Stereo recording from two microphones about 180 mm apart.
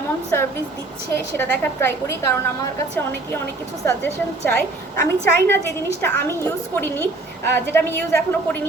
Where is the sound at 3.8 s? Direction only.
10° left (ahead or behind).